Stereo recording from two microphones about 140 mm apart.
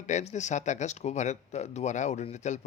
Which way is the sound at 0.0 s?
55° left (ahead or behind).